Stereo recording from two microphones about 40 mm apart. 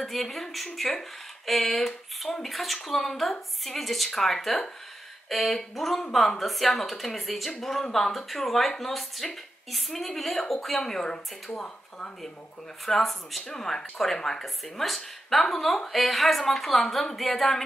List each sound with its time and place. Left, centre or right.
0.0 s speech: centre
12.8 s speech: centre